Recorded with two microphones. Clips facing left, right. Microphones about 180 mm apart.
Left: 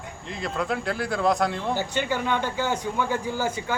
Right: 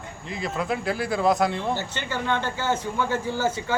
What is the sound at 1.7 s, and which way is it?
Speech, 15° left (ahead or behind).